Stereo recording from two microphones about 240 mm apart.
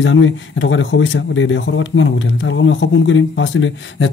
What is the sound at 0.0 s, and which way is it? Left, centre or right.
Speech, left.